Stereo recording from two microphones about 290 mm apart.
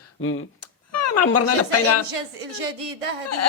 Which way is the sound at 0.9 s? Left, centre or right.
Left.